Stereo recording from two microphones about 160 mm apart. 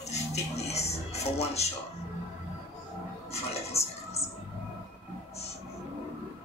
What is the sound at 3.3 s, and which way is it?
Music, 40° left (ahead or behind).